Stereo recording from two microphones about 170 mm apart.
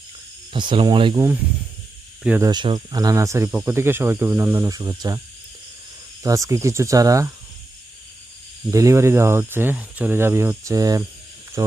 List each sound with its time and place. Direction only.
0.5 s speech: 30° right (ahead or behind)
2.2 s speech: 10° right (ahead or behind)
2.5 s speech: 25° right (ahead or behind)
6.2 s speech: 20° right (ahead or behind)
8.7 s speech: 20° right (ahead or behind)